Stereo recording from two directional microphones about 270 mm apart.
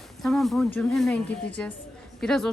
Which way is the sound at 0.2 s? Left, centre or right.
Centre.